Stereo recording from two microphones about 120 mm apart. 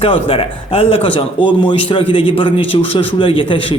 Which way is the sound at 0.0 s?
50° left (ahead or behind).